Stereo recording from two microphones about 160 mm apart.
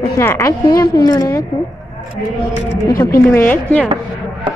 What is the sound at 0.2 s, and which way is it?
A woman's voice, 15° left (ahead or behind).